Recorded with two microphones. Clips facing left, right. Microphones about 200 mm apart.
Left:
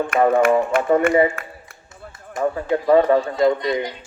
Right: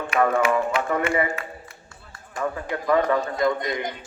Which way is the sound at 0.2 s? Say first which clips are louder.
Left 4 dB; 30° left (ahead or behind).